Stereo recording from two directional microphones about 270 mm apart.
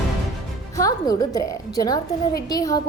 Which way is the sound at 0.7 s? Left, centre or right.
Centre.